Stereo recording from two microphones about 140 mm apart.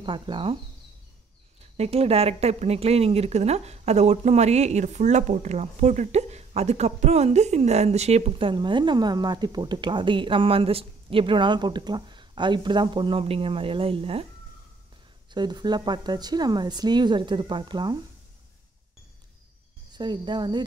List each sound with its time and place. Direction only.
0.0 s a woman's voice: 35° right (ahead or behind)
1.8 s speech: 45° right (ahead or behind)
15.3 s a woman's voice: 30° right (ahead or behind)
19.9 s a woman's voice: 30° right (ahead or behind)